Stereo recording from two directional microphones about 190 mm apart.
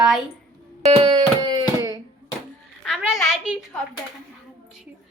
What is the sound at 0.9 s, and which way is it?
Music, 25° right (ahead or behind).